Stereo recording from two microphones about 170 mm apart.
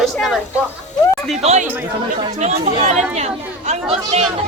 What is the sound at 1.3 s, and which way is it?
Speech, 40° right (ahead or behind).